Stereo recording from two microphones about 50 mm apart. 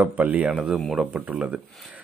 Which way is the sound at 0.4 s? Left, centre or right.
Centre.